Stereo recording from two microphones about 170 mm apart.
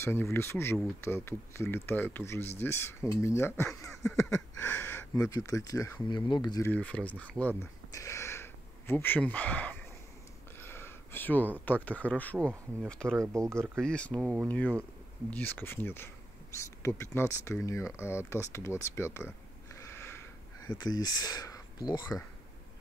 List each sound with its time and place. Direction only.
0.0 s speech: 15° left (ahead or behind)
5.1 s speech: 20° left (ahead or behind)
6.0 s speech: 25° left (ahead or behind)
6.7 s speech: 10° left (ahead or behind)
13.2 s speech: 15° right (ahead or behind)
13.7 s speech: 5° left (ahead or behind)
20.0 s a sound: 15° left (ahead or behind)